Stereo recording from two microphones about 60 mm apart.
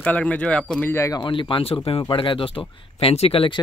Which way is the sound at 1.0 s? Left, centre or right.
Left.